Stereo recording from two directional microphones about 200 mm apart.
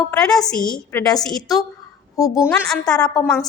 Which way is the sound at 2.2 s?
15° left (ahead or behind).